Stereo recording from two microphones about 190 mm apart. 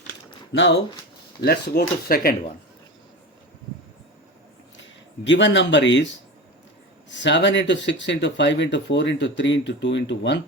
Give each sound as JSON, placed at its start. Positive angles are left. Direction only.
{"t": 1.4, "sound": "speech", "side_deg": 55}
{"t": 5.2, "sound": "speech", "side_deg": 70}
{"t": 7.1, "sound": "speech", "side_deg": 70}